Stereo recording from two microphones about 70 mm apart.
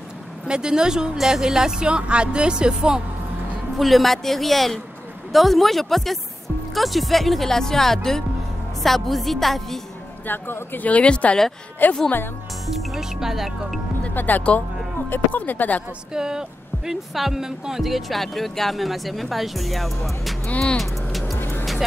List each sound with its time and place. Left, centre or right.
0.5 s speech: centre
3.7 s speech: centre
10.2 s speech: left
12.9 s speech: centre
14.0 s speech: left
16.1 s speech: centre
20.4 s speech: centre
20.7 s speech: centre
21.4 s music: left